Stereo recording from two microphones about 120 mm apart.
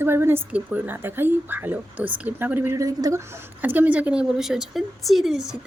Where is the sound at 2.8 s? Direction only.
30° right (ahead or behind).